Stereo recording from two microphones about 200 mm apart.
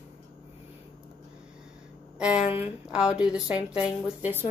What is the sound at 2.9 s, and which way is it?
A woman's voice, 5° right (ahead or behind).